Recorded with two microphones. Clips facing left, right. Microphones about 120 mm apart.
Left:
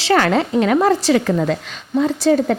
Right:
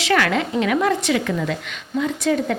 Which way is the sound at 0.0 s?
35° left (ahead or behind).